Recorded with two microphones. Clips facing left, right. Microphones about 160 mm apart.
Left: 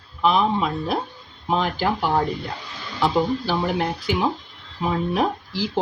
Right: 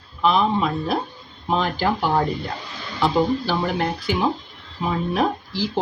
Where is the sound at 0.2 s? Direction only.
10° left (ahead or behind).